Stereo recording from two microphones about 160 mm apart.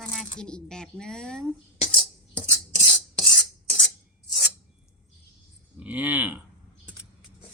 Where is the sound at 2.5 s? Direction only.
25° left (ahead or behind).